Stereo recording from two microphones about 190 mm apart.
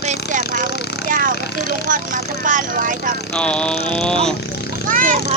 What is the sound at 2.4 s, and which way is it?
Speech, 45° right (ahead or behind).